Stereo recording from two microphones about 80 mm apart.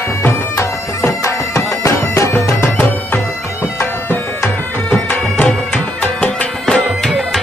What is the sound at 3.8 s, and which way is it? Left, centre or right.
Music, left.